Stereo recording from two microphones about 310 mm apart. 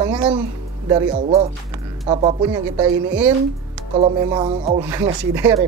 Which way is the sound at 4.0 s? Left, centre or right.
Centre.